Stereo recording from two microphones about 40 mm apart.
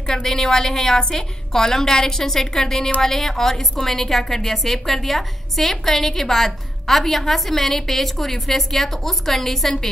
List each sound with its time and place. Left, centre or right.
0.0 s a woman's voice: centre